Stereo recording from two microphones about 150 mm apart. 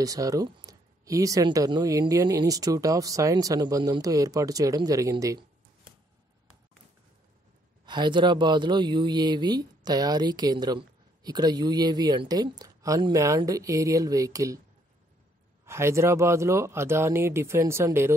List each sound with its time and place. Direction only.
0.0 s speech: 25° right (ahead or behind)
7.8 s speech: 30° right (ahead or behind)
15.6 s speech: 20° right (ahead or behind)